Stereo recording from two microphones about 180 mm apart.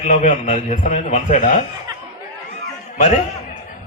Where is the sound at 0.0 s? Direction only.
40° left (ahead or behind).